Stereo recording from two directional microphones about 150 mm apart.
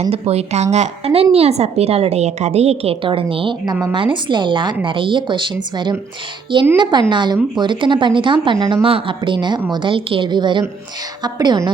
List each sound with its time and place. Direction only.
0.0 s a woman's voice: 45° right (ahead or behind); by 11.7 s 25° right (ahead or behind)